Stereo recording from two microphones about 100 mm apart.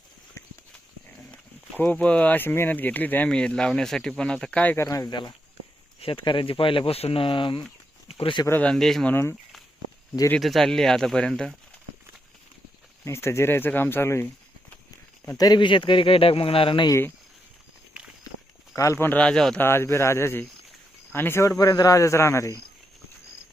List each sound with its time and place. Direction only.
1.8 s speech: 15° left (ahead or behind)
4.8 s speech: 35° left (ahead or behind)
6.0 s speech: 60° left (ahead or behind)
8.6 s speech: 5° left (ahead or behind)
10.4 s speech: centre (ahead or behind)
13.1 s speech: 25° left (ahead or behind)
15.4 s speech: 45° left (ahead or behind); by 16.8 s 60° left (ahead or behind)
18.3 s walk: 35° left (ahead or behind)
18.8 s speech: 25° left (ahead or behind)
19.2 s speech: 5° left (ahead or behind)
19.5 s speech: 25° left (ahead or behind)